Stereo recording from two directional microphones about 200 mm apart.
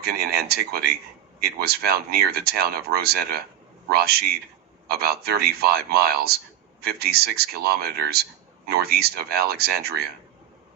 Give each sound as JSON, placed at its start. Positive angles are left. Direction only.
{"t": 0.0, "sound": "speech", "side_deg": -50}